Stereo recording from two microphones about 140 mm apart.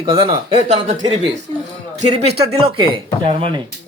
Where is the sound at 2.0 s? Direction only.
45° right (ahead or behind).